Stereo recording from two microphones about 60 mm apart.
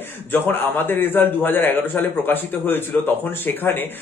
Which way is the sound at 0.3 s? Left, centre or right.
Left.